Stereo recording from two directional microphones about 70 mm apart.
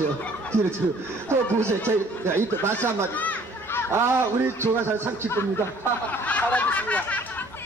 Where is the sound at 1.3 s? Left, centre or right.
Right.